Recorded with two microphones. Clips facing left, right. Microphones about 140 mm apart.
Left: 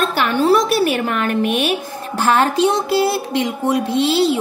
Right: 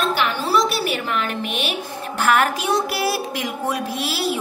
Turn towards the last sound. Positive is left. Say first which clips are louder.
# left 8 dB
turn(degrees=25)  # may be behind; listen again after turning